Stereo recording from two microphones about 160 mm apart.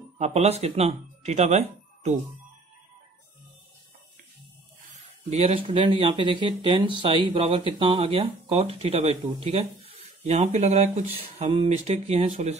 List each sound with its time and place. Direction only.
0.2 s speech: 40° right (ahead or behind)
5.3 s speech: 40° right (ahead or behind)